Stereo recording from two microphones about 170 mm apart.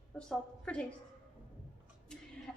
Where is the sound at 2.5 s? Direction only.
5° left (ahead or behind).